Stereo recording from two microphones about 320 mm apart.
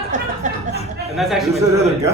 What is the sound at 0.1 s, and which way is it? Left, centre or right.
Speech, right.